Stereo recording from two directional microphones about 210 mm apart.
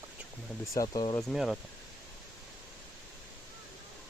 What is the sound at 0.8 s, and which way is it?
Speech, 20° left (ahead or behind).